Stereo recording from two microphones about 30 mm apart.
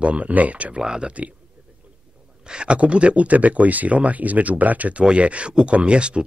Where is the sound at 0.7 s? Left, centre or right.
Right.